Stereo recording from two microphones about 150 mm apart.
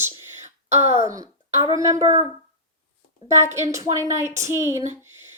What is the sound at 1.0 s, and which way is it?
Speech, 20° right (ahead or behind).